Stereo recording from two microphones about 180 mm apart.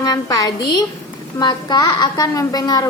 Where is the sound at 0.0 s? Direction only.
20° left (ahead or behind).